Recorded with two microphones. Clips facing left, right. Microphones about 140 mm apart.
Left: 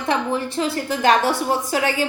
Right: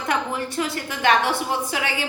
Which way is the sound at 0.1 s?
25° left (ahead or behind).